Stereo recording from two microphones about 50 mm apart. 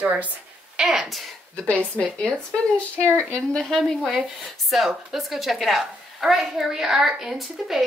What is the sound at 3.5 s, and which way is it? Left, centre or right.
A woman's voice, centre.